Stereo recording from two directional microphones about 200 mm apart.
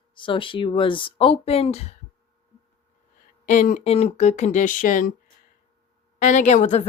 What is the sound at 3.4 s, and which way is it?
Speech, 40° left (ahead or behind).